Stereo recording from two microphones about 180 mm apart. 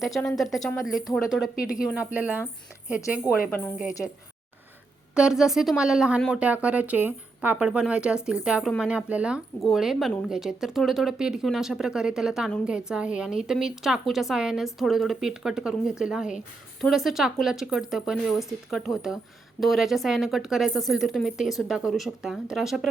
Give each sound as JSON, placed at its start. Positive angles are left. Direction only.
{"t": 0.0, "sound": "speech", "side_deg": 0}
{"t": 5.1, "sound": "speech", "side_deg": -5}